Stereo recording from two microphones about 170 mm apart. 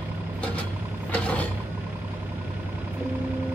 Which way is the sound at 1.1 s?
10° left (ahead or behind).